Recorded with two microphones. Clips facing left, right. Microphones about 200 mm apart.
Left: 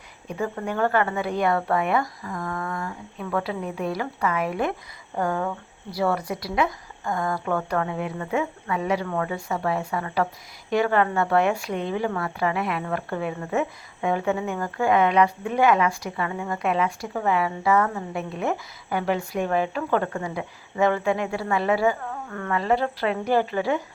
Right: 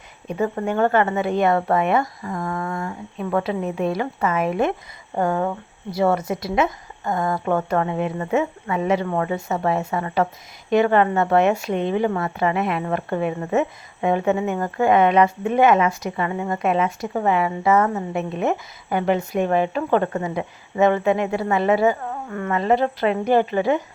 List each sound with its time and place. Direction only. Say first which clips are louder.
0.3 s a woman's voice: right 5 dB; 25° right (ahead or behind)